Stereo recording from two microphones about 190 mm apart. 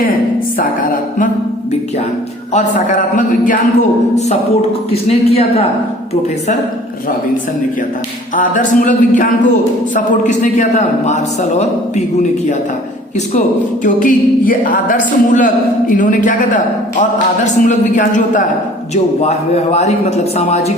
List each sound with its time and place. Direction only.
0.6 s a sound: 45° left (ahead or behind)
2.7 s speech: 45° left (ahead or behind)
5.0 s a man's voice: 30° left (ahead or behind)
8.4 s a man's voice: 45° left (ahead or behind)
13.8 s a man's voice: 45° left (ahead or behind)